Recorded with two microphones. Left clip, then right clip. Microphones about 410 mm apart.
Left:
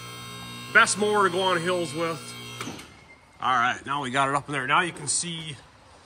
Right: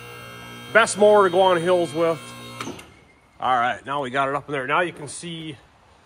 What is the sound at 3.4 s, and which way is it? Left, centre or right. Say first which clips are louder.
Speech: right 2 dB; centre.